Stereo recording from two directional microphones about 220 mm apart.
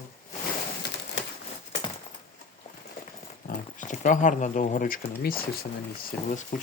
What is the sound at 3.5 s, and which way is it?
Speech, 35° left (ahead or behind).